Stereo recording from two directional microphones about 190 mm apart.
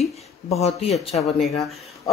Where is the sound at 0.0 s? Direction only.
35° left (ahead or behind).